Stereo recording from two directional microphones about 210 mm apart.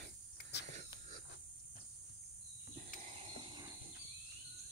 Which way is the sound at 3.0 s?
30° right (ahead or behind).